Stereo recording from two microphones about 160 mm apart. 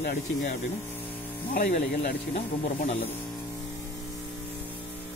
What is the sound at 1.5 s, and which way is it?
Speech, 50° left (ahead or behind).